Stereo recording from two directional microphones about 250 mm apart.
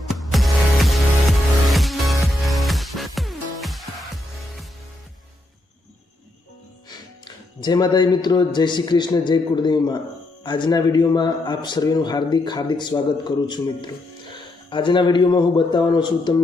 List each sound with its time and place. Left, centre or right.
0.1 s music: centre
7.3 s a man's voice: centre